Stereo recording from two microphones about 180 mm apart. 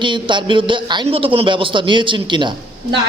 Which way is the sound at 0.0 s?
25° right (ahead or behind).